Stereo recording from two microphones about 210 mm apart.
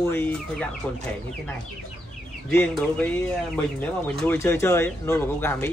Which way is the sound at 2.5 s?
5° left (ahead or behind).